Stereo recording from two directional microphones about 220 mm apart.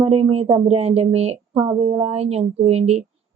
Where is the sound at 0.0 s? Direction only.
30° right (ahead or behind).